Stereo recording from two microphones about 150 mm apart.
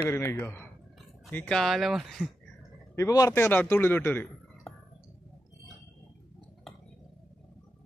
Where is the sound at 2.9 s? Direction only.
20° left (ahead or behind).